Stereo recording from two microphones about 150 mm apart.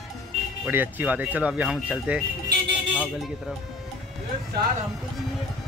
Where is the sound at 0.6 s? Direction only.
10° right (ahead or behind).